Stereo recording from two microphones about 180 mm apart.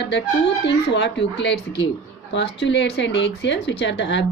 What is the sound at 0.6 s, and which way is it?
A woman's voice, 75° left (ahead or behind).